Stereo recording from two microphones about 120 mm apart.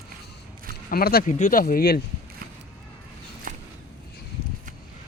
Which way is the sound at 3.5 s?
90° right.